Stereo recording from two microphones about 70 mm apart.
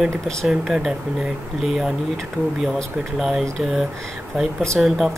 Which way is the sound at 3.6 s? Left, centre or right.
Centre.